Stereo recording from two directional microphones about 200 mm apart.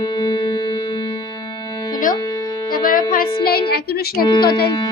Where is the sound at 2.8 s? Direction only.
45° left (ahead or behind).